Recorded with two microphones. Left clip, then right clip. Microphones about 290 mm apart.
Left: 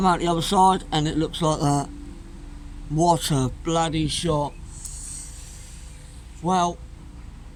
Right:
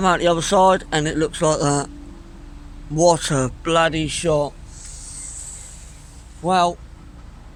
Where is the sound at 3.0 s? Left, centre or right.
Centre.